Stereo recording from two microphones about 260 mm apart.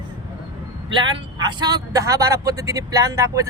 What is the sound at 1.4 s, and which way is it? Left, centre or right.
Speech, centre.